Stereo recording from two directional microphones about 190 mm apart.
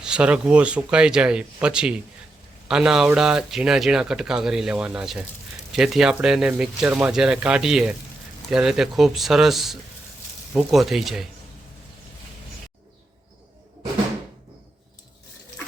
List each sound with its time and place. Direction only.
0.0 s speech: 5° right (ahead or behind)